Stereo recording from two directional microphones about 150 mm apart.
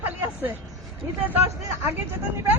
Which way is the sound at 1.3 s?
15° right (ahead or behind).